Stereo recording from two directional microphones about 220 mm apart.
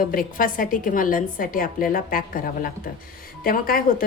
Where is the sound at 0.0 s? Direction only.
40° left (ahead or behind).